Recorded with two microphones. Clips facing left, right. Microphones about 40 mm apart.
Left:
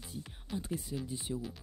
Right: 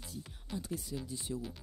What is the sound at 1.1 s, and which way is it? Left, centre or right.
Speech, left.